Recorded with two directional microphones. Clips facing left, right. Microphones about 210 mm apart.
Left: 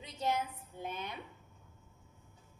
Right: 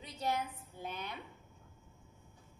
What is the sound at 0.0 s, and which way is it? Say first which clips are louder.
A woman's voice: left 2 dB; 20° left (ahead or behind).